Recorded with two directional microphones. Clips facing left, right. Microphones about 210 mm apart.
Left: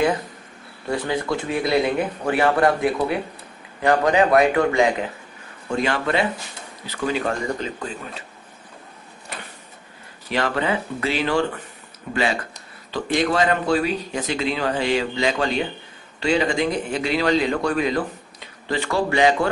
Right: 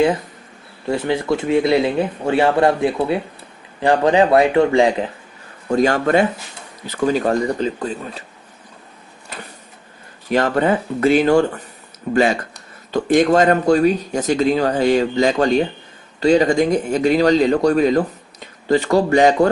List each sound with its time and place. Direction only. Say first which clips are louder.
0.8 s speech: right 5 dB; 25° right (ahead or behind)
5.7 s a man's voice: right 7 dB; 40° right (ahead or behind)
10.3 s a man's voice: right 6 dB; 45° right (ahead or behind)